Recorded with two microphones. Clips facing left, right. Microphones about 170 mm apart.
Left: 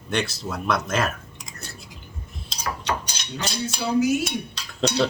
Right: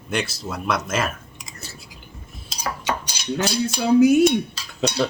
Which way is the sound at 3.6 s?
55° right (ahead or behind).